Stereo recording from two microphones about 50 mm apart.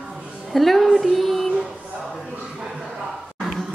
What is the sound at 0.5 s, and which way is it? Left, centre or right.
Music, centre.